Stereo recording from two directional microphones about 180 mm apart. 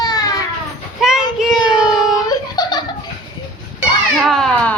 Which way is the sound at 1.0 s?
Centre (ahead or behind).